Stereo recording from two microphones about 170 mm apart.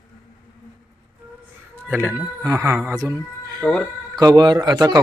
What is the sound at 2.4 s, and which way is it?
Speech, 20° right (ahead or behind).